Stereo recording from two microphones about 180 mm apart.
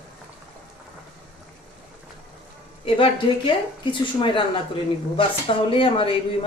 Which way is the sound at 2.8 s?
30° left (ahead or behind).